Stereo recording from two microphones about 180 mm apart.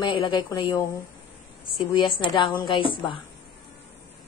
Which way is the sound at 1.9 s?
25° left (ahead or behind).